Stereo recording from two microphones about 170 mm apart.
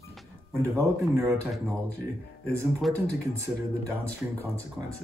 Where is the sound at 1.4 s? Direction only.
10° left (ahead or behind).